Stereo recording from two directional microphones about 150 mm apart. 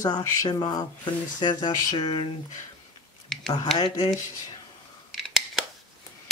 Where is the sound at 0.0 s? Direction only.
25° left (ahead or behind).